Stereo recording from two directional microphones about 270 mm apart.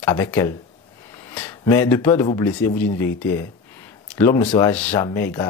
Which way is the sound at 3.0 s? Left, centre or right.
Centre.